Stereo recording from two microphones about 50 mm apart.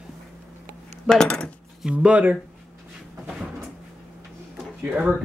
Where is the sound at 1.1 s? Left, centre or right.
Centre.